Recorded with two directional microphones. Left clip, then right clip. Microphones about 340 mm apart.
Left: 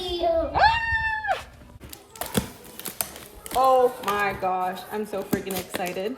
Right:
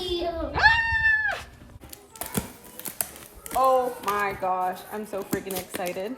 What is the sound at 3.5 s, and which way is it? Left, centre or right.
Speech, centre.